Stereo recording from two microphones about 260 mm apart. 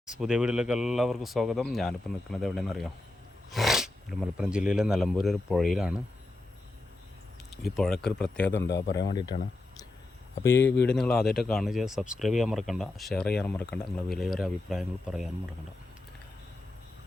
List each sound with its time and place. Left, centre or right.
0.2 s speech: centre
7.5 s speech: centre
8.6 s speech: left
10.4 s speech: centre